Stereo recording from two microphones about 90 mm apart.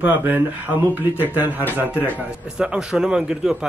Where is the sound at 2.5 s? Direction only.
10° right (ahead or behind).